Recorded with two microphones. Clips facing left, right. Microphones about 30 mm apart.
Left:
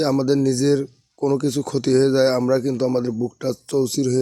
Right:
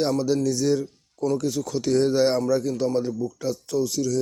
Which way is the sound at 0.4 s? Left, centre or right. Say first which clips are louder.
Left 4 dB; left.